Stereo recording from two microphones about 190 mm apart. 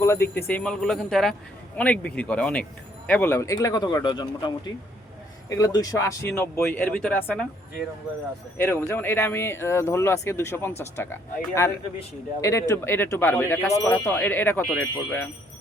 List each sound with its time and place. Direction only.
0.0 s speech: 15° left (ahead or behind)
8.5 s speech: 10° left (ahead or behind)